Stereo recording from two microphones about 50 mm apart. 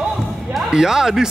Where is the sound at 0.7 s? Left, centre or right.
Centre.